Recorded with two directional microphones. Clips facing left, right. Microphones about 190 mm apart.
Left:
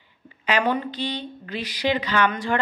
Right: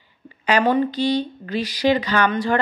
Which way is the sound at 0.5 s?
40° right (ahead or behind).